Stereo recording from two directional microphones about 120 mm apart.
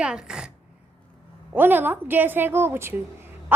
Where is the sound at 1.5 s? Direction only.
15° right (ahead or behind).